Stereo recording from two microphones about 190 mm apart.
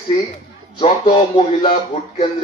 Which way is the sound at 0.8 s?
25° left (ahead or behind).